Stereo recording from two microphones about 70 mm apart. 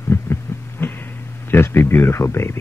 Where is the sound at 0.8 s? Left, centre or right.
Left.